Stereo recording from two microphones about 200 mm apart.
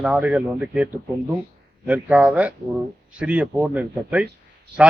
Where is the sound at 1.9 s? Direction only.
5° right (ahead or behind).